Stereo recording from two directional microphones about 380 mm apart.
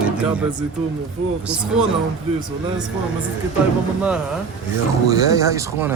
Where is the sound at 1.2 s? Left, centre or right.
Right.